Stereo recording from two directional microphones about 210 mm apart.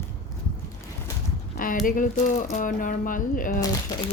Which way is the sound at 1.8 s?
40° left (ahead or behind).